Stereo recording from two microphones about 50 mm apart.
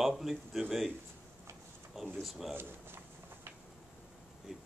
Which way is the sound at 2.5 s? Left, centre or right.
Right.